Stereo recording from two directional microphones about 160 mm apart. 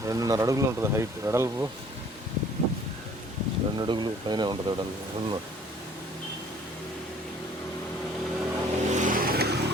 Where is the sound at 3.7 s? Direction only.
30° right (ahead or behind).